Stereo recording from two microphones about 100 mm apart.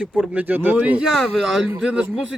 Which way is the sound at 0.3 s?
15° right (ahead or behind).